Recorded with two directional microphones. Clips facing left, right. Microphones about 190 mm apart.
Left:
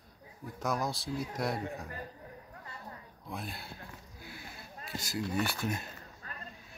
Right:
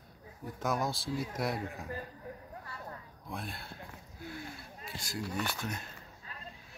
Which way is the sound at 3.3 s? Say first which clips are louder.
Even; centre (ahead or behind).